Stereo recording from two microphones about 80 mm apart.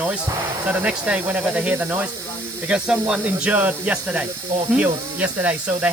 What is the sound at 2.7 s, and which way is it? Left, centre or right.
Speech, centre.